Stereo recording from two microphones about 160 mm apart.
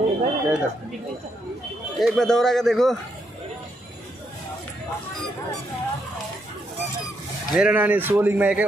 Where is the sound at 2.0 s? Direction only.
5° left (ahead or behind).